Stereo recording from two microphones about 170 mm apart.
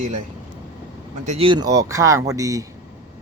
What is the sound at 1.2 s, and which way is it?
Speech, 40° right (ahead or behind).